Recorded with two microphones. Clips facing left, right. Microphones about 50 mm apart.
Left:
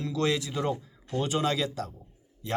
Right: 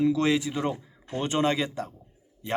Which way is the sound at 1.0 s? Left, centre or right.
Right.